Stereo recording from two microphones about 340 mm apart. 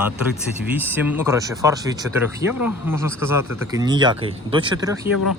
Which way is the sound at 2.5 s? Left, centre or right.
Left.